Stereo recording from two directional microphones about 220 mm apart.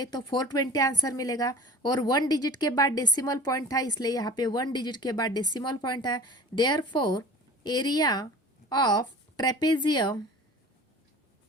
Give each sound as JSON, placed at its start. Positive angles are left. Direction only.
{"t": 0.0, "sound": "a woman's voice", "side_deg": 20}